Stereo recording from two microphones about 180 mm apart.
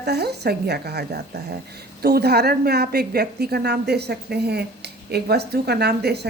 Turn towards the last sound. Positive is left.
turn(degrees=-65)  # may be behind; listen again after turning